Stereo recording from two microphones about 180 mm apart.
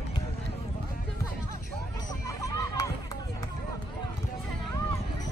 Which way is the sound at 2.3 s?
15° left (ahead or behind).